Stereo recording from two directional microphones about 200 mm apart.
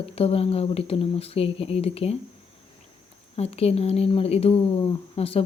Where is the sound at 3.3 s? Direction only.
30° left (ahead or behind).